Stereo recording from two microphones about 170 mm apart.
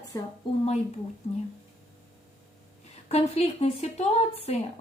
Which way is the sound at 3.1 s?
35° left (ahead or behind).